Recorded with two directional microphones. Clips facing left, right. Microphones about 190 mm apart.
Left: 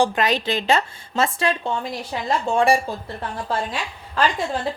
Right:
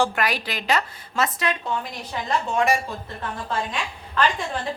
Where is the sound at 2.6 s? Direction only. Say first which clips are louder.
Left 4 dB; 30° left (ahead or behind).